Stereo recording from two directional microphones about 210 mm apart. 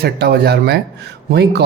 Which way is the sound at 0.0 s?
50° right (ahead or behind).